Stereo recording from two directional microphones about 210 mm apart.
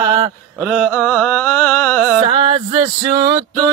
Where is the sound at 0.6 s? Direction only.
Centre (ahead or behind).